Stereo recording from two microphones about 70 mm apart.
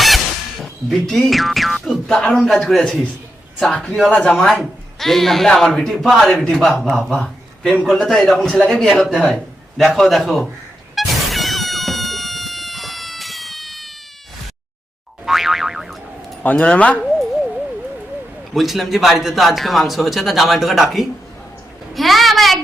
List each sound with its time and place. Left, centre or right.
0.6 s speech: centre
7.1 s a sound: centre
7.9 s a man's voice: centre
10.9 s cat: centre
15.3 s boing: centre
16.4 s speech: centre
18.5 s speech: centre
21.9 s a sound: centre